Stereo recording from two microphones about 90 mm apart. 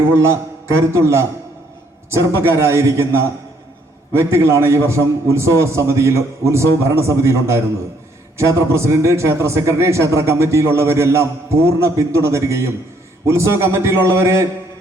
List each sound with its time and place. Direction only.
0.1 s a man's voice: 30° right (ahead or behind)